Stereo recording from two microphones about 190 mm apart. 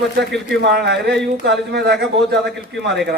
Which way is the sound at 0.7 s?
60° right (ahead or behind).